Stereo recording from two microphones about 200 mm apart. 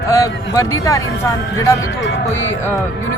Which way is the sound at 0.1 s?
15° left (ahead or behind).